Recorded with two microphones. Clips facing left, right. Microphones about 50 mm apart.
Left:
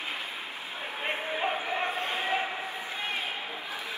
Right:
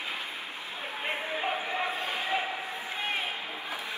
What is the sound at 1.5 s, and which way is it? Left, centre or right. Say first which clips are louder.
Bow-wow: left 1 dB; left.